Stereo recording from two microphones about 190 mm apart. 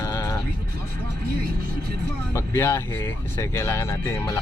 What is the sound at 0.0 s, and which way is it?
Music, 15° left (ahead or behind).